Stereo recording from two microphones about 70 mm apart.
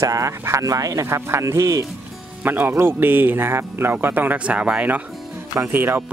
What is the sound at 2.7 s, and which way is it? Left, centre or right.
Speech, right.